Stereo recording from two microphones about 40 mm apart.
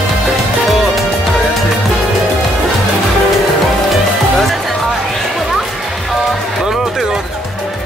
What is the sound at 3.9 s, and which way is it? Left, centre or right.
Music, centre.